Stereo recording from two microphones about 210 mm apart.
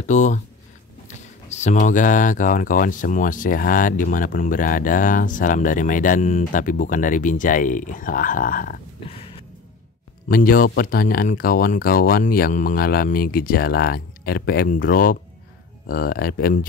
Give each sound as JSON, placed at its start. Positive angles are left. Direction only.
{"t": 0.0, "sound": "speech", "side_deg": 35}
{"t": 9.0, "sound": "a sound", "side_deg": 25}
{"t": 10.2, "sound": "speech", "side_deg": 45}